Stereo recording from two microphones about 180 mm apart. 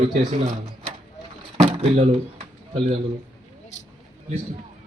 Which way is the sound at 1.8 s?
35° right (ahead or behind).